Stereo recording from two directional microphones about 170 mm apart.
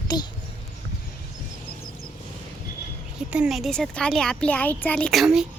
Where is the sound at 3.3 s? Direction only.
5° right (ahead or behind).